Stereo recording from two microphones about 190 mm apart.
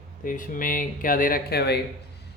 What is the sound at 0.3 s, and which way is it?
Speech, 45° left (ahead or behind).